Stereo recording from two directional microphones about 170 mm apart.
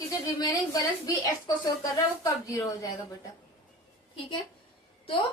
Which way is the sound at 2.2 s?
20° left (ahead or behind).